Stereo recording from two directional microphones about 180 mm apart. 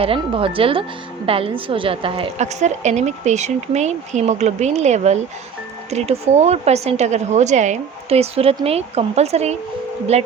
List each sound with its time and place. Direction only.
0.0 s a woman's voice: 30° right (ahead or behind)